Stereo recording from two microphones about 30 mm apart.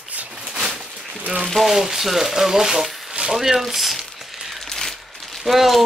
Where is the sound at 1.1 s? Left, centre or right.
Right.